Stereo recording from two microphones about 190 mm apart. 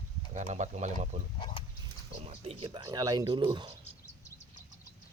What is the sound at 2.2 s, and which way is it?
Speech, 30° right (ahead or behind).